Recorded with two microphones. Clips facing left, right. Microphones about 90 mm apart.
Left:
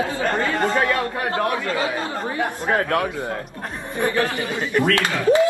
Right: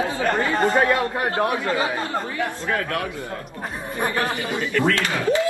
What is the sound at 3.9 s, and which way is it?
Speech, 20° right (ahead or behind).